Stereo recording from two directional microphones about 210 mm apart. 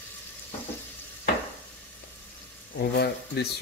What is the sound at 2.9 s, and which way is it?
Speech, 50° left (ahead or behind).